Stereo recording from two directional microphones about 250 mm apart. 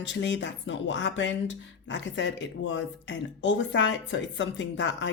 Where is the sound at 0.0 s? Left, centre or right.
Left.